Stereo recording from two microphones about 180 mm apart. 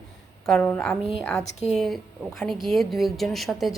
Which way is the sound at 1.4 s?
40° left (ahead or behind).